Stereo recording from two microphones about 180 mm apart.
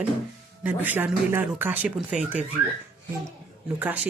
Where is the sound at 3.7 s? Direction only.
10° right (ahead or behind).